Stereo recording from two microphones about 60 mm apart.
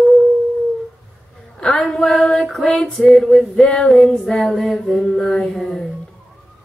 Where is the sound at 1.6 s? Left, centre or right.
Centre.